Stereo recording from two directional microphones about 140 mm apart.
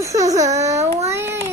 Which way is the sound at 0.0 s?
25° right (ahead or behind).